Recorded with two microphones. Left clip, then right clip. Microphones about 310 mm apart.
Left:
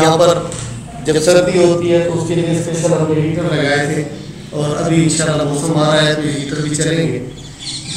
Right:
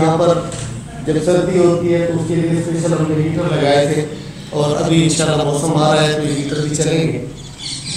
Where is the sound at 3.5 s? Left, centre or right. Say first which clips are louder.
Right 3 dB; centre.